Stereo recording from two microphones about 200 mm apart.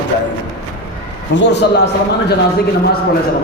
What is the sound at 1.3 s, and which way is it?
A man's voice, 60° left (ahead or behind).